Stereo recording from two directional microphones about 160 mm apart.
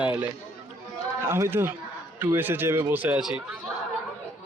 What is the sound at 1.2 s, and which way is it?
Speech, 15° right (ahead or behind).